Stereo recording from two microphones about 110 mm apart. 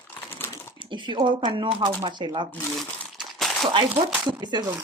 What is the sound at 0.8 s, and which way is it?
Speech, 45° right (ahead or behind).